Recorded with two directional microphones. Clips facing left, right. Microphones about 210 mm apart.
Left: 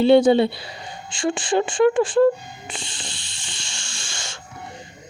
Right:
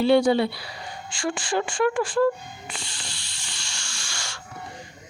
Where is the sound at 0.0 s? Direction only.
25° left (ahead or behind).